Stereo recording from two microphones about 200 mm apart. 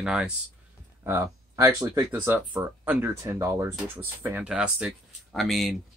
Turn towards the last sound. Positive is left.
turn(degrees=0)  # may be behind; listen again after turning